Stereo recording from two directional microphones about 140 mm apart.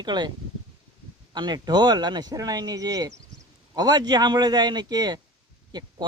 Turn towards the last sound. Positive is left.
turn(degrees=-30)  # may be behind; listen again after turning